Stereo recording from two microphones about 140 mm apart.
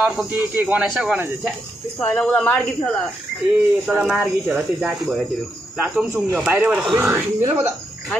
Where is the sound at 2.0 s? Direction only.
10° left (ahead or behind).